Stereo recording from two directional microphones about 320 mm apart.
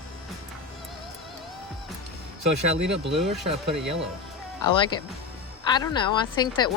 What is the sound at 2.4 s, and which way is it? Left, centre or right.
Speech, right.